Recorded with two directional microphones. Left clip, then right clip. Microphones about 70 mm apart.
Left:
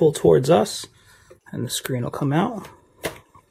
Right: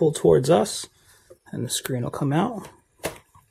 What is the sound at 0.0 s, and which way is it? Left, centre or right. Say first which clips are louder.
Speech: left 2 dB; centre.